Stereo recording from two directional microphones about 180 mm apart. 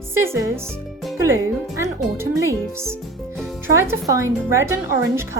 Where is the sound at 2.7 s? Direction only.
15° right (ahead or behind).